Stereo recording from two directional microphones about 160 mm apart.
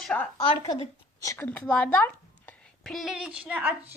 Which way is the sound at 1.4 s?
10° left (ahead or behind).